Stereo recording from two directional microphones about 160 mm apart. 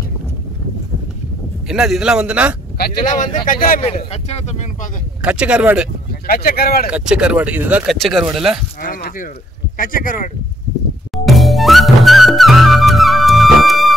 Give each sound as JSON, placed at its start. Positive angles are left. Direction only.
{"t": 1.7, "sound": "speech", "side_deg": 0}
{"t": 2.8, "sound": "speech", "side_deg": 55}
{"t": 3.8, "sound": "speech", "side_deg": 40}
{"t": 5.2, "sound": "speech", "side_deg": -5}
{"t": 6.2, "sound": "speech", "side_deg": 70}
{"t": 6.9, "sound": "speech", "side_deg": -5}
{"t": 8.8, "sound": "a sound", "side_deg": 60}
{"t": 9.8, "sound": "speech", "side_deg": 60}
{"t": 11.2, "sound": "music", "side_deg": 0}